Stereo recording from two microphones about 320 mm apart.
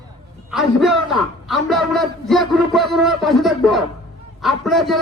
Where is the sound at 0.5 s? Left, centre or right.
Centre.